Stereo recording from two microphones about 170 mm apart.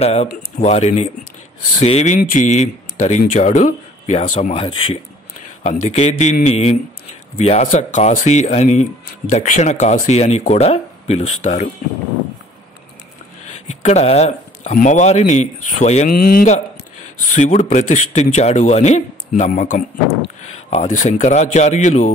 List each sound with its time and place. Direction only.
0.0 s speech: 35° left (ahead or behind)
7.6 s speech: 50° left (ahead or behind)
13.5 s speech: 40° left (ahead or behind)
16.1 s speech: 60° left (ahead or behind)
17.2 s speech: 45° left (ahead or behind)